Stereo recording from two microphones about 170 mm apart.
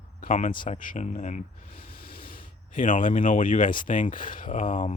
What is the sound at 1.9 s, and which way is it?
Speech, 60° left (ahead or behind).